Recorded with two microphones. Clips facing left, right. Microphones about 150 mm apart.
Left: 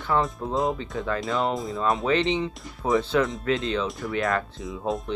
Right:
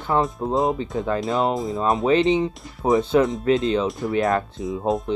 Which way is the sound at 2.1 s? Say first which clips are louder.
Right 5 dB; 25° right (ahead or behind).